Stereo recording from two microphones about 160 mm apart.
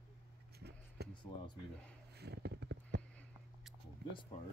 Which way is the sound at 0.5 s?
90° right.